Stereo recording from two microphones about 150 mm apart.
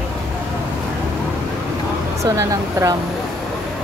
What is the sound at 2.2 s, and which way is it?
Speech, 20° right (ahead or behind).